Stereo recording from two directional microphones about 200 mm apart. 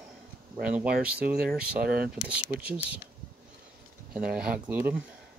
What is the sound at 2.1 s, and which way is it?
Speech, 5° right (ahead or behind).